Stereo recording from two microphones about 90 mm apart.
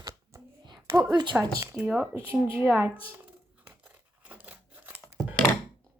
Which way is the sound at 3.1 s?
10° right (ahead or behind).